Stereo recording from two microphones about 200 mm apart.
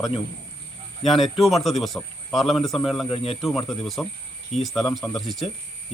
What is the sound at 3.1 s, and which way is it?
Speech, 30° left (ahead or behind).